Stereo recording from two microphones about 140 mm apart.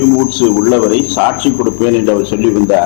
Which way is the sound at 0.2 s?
20° left (ahead or behind).